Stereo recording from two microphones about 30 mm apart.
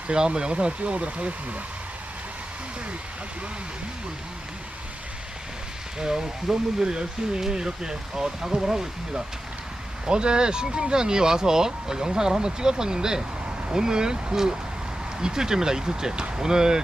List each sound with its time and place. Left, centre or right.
0.1 s speech: right
6.0 s speech: right
10.1 s speech: right